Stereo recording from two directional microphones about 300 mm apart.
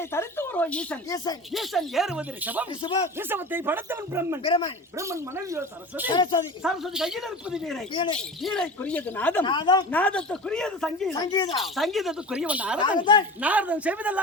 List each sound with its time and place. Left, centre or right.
0.0 s speech: centre
1.5 s speech: centre
4.4 s speech: centre
4.9 s speech: centre
6.1 s speech: centre
6.6 s speech: centre
11.1 s speech: centre
11.6 s speech: centre
13.0 s speech: centre
13.4 s speech: centre